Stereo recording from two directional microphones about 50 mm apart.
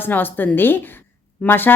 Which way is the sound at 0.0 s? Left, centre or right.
Left.